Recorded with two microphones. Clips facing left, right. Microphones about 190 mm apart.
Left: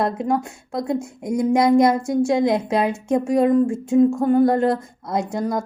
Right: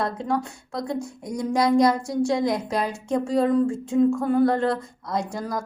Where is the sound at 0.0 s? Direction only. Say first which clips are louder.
Left 4 dB; 20° left (ahead or behind).